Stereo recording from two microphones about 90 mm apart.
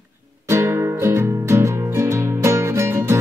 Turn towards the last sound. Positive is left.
turn(degrees=-30)  # may be behind; listen again after turning